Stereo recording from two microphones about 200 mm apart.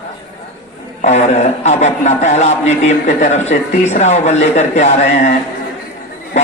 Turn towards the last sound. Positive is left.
turn(degrees=35)  # may be behind; listen again after turning